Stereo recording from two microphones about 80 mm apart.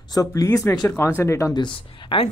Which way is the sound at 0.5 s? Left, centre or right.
Left.